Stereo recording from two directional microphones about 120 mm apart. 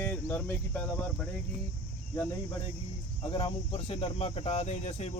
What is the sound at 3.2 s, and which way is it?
Speech, 45° left (ahead or behind).